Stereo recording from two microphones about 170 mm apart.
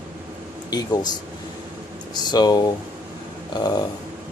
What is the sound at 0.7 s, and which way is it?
Speech, 25° left (ahead or behind).